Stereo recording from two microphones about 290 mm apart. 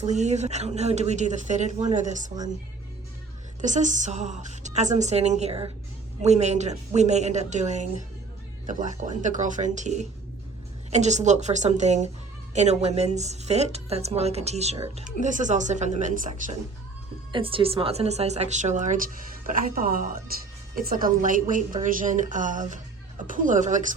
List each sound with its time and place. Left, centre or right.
0.0 s speech: right
3.6 s speech: right